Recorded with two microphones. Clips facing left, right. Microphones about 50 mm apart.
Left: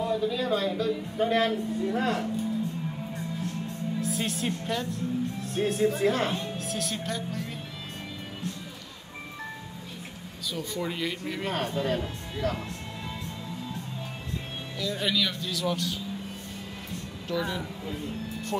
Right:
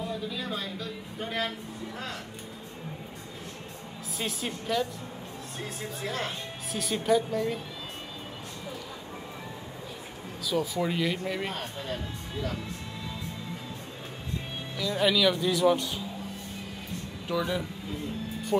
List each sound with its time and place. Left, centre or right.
0.0 s a man's voice: centre
4.0 s a woman's voice: centre
5.9 s speech: left
6.7 s a man's voice: centre
10.5 s a man's voice: centre
14.8 s a man's voice: centre
15.4 s speech: right
17.3 s speech: centre